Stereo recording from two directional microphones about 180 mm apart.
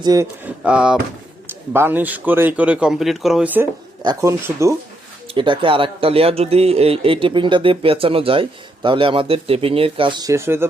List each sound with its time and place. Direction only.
0.0 s a man's voice: 20° right (ahead or behind)
0.4 s a man's voice: 5° right (ahead or behind)
4.0 s a man's voice: 20° right (ahead or behind)
5.3 s a man's voice: 30° right (ahead or behind)